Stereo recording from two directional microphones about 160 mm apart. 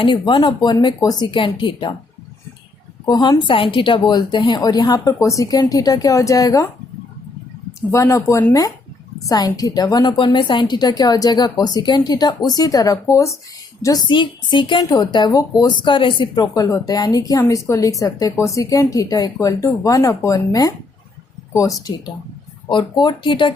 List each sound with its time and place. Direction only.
0.0 s a woman's voice: 30° left (ahead or behind)
3.1 s a woman's voice: 25° left (ahead or behind)
7.8 s a woman's voice: 20° left (ahead or behind)
14.1 s a woman's voice: 30° left (ahead or behind)